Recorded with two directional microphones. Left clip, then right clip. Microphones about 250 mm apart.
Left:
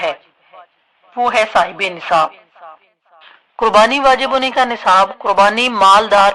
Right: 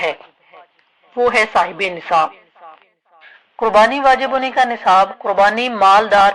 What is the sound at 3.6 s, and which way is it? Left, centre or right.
Speech, left.